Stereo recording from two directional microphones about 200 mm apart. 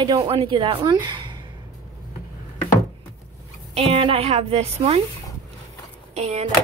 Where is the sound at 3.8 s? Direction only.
30° right (ahead or behind).